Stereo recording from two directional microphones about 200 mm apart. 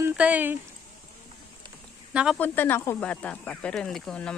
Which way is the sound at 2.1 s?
5° right (ahead or behind).